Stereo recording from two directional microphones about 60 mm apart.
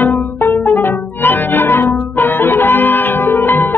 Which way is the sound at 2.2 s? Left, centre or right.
Left.